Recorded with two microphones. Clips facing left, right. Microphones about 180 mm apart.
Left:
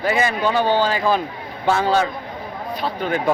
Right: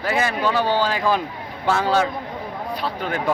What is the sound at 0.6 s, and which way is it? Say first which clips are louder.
Speech: left 2 dB; 20° left (ahead or behind).